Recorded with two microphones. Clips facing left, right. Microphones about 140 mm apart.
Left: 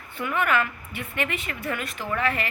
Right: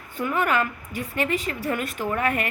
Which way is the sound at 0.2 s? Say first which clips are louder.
Right 1 dB; 40° right (ahead or behind).